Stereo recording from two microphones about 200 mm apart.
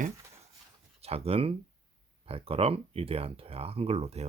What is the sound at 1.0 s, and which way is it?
Speech, 30° right (ahead or behind).